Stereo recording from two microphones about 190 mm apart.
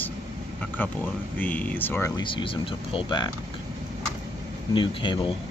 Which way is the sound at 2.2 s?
25° left (ahead or behind).